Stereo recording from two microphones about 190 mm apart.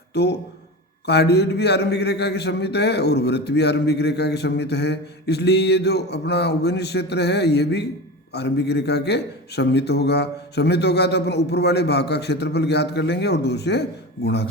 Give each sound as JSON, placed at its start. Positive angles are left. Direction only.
{"t": 0.1, "sound": "a man's voice", "side_deg": 60}